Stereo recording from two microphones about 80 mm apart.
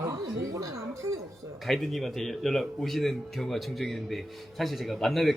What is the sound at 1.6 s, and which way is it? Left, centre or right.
Speech, centre.